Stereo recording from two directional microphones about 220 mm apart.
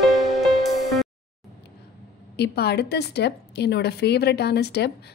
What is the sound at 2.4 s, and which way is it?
A woman's voice, 45° left (ahead or behind).